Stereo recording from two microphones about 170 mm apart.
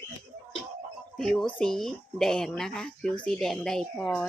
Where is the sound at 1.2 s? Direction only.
Centre (ahead or behind).